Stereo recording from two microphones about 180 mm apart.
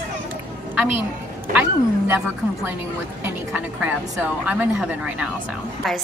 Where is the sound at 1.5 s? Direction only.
10° right (ahead or behind).